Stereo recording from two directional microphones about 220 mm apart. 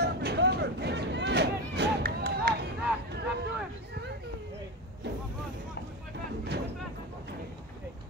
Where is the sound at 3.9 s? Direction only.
50° right (ahead or behind).